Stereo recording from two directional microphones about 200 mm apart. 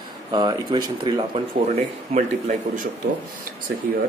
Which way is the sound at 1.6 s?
35° right (ahead or behind).